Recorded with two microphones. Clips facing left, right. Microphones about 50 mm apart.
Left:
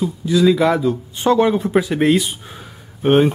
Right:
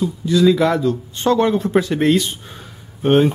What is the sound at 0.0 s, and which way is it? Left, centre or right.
Speech, centre.